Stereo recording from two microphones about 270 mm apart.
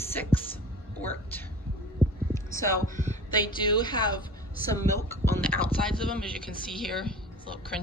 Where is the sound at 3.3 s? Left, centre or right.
Centre.